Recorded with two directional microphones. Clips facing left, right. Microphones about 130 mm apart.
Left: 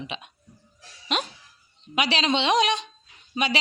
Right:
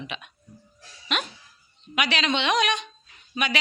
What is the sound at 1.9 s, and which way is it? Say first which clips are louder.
Speech: left 2 dB; 30° left (ahead or behind).